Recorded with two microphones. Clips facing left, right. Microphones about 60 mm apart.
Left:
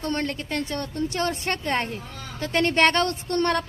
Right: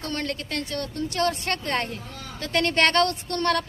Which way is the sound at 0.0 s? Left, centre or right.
Left.